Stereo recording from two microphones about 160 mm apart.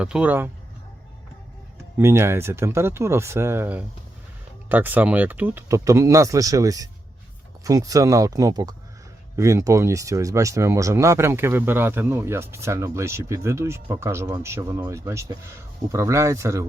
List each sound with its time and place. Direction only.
0.0 s speech: 5° right (ahead or behind)
2.0 s speech: 15° right (ahead or behind)